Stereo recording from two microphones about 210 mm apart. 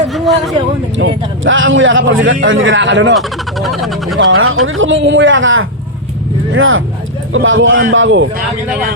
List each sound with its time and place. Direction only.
0.1 s a man's voice: centre (ahead or behind)
0.9 s a man's voice: 65° right (ahead or behind)
3.2 s speech: centre (ahead or behind)
4.2 s a man's voice: 75° right (ahead or behind)